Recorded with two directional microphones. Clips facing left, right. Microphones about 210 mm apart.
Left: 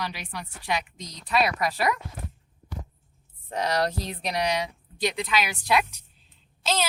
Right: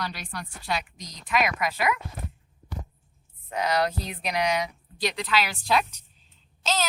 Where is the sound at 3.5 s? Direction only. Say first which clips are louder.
Even; 40° left (ahead or behind).